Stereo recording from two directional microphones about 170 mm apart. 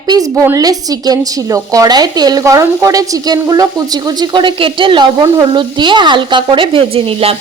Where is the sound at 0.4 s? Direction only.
20° right (ahead or behind).